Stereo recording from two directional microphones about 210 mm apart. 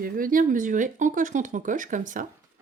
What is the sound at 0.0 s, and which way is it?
Speech, 40° right (ahead or behind).